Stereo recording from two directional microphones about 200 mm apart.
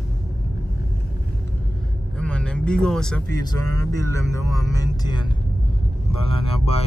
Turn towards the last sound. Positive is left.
turn(degrees=30)  # may be behind; listen again after turning